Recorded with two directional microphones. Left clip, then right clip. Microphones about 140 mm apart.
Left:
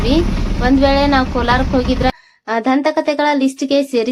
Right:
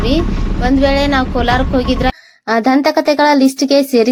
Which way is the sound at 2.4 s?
30° right (ahead or behind).